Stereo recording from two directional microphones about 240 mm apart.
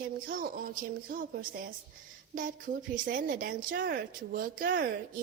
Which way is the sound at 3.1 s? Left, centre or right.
Right.